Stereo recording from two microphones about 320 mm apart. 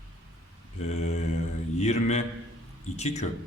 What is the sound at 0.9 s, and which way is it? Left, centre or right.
A man's voice, left.